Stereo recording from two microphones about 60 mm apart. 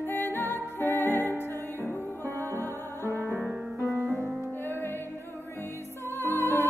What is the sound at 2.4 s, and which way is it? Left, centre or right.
Music, right.